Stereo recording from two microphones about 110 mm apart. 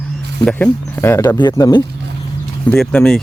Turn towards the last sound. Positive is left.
turn(degrees=10)  # may be behind; listen again after turning